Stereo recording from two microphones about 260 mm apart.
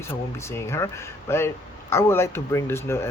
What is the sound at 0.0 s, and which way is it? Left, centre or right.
Speech, centre.